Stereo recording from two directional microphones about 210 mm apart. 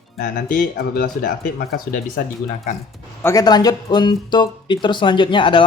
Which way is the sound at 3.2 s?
15° left (ahead or behind).